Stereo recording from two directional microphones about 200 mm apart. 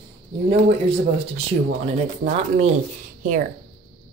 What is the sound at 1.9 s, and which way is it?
Speech, 35° right (ahead or behind).